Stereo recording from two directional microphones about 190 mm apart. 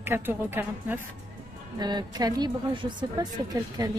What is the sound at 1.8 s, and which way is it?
A woman's voice, 20° right (ahead or behind).